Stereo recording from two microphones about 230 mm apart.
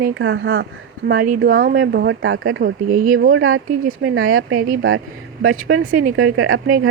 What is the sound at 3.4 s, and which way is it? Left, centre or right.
Speech, right.